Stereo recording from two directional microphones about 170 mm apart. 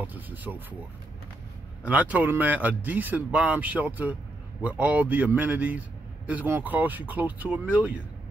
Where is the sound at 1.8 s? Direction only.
10° right (ahead or behind).